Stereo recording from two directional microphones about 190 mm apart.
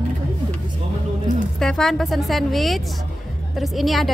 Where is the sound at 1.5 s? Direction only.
Centre (ahead or behind).